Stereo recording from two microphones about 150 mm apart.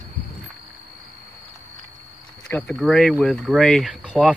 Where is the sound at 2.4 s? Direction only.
5° left (ahead or behind).